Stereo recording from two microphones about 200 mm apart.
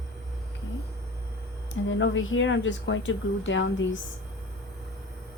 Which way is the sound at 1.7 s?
70° left (ahead or behind).